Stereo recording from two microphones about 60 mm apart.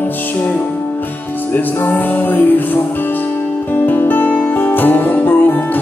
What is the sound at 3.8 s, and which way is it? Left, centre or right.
Music, left.